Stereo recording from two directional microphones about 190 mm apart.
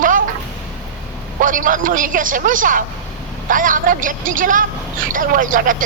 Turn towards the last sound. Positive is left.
turn(degrees=-45)  # may be behind; listen again after turning